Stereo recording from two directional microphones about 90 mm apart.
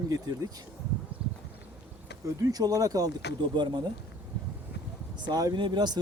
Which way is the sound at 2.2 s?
45° right (ahead or behind).